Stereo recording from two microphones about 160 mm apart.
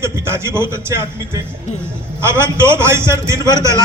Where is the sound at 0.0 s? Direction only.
15° right (ahead or behind).